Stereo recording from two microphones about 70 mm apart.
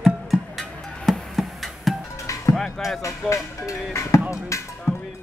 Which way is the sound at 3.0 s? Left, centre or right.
Left.